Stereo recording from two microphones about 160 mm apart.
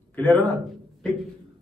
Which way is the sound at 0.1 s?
10° left (ahead or behind).